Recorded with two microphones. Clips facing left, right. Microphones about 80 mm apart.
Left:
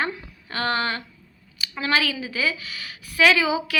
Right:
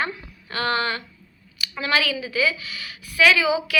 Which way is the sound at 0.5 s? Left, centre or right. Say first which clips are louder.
Right 1 dB; left.